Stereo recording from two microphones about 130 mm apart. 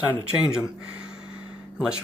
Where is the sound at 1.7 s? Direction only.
5° right (ahead or behind).